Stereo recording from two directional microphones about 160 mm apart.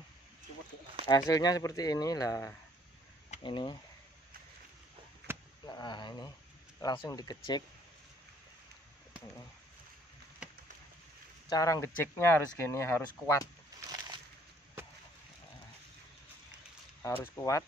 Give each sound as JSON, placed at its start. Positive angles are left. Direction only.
{"t": 1.0, "sound": "speech", "side_deg": 20}
{"t": 3.4, "sound": "speech", "side_deg": 30}
{"t": 5.3, "sound": "a sound", "side_deg": -15}
{"t": 5.7, "sound": "speech", "side_deg": 25}
{"t": 10.4, "sound": "a sound", "side_deg": -5}
{"t": 11.4, "sound": "speech", "side_deg": 20}
{"t": 13.7, "sound": "slosh", "side_deg": -25}
{"t": 17.0, "sound": "speech", "side_deg": 15}